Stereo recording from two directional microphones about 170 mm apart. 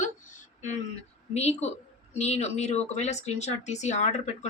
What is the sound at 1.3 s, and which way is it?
A woman's voice, 40° left (ahead or behind).